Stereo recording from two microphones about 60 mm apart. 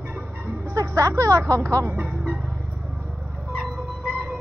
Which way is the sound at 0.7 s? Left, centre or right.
Right.